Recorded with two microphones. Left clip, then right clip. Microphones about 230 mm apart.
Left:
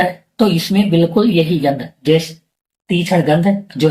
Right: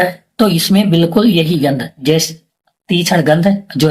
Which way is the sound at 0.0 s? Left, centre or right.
Right.